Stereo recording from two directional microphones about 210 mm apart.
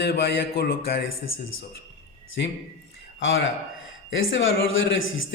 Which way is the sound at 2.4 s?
55° left (ahead or behind).